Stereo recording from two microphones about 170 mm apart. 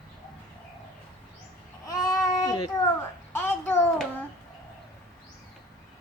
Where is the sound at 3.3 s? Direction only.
15° left (ahead or behind).